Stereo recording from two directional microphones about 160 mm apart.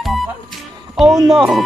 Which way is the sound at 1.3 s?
Centre (ahead or behind).